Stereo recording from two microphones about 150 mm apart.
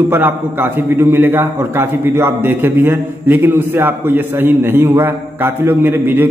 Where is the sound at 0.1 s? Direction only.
15° right (ahead or behind).